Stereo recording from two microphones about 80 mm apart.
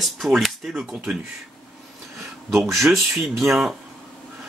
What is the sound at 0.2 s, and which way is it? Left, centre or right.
Speech, centre.